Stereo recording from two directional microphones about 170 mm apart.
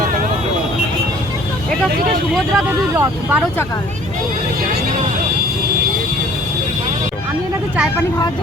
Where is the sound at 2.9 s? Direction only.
10° right (ahead or behind).